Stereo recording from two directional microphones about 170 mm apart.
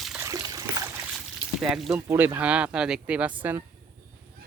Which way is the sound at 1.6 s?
5° right (ahead or behind).